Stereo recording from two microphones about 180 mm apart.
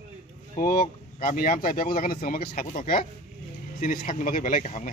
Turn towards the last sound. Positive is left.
turn(degrees=40)  # may be behind; listen again after turning